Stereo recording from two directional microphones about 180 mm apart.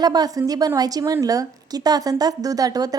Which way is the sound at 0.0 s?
20° right (ahead or behind).